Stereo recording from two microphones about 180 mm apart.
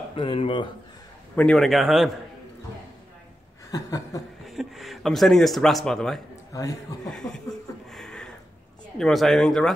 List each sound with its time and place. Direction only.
0.1 s speech: 30° left (ahead or behind)
1.3 s speech: 5° left (ahead or behind)
3.7 s speech: 20° left (ahead or behind)
4.5 s speech: centre (ahead or behind)
6.5 s speech: 20° left (ahead or behind)
7.1 s speech: 5° left (ahead or behind)
7.9 s a sound: 5° left (ahead or behind)
8.9 s speech: centre (ahead or behind)